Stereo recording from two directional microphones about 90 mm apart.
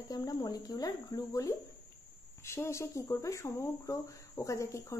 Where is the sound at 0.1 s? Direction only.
45° left (ahead or behind).